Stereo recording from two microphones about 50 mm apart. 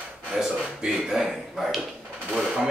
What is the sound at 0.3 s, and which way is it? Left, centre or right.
Speech, right.